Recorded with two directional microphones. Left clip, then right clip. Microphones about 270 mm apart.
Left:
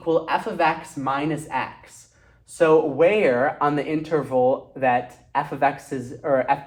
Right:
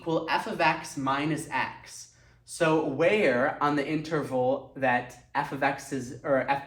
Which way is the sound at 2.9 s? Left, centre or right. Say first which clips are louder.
Left 6 dB; left.